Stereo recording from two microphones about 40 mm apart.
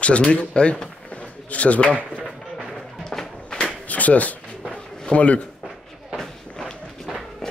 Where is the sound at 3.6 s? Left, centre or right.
Left.